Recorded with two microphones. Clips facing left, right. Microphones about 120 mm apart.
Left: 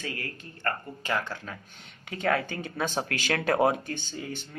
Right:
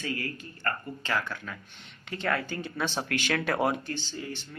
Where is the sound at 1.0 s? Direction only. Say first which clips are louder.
Left 1 dB; 25° left (ahead or behind).